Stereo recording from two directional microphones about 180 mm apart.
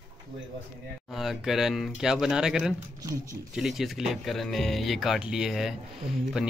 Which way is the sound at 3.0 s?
20° right (ahead or behind).